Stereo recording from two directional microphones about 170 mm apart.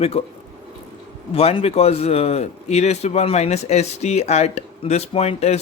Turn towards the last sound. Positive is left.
turn(degrees=40)  # may be behind; listen again after turning